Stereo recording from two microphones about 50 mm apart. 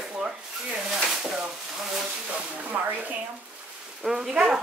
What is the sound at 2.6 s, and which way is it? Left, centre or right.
Speech, right.